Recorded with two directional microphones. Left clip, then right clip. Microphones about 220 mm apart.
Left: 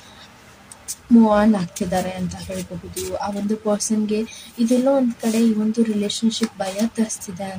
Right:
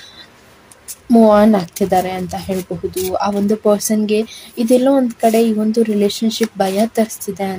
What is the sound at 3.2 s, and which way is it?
Speech, 45° right (ahead or behind).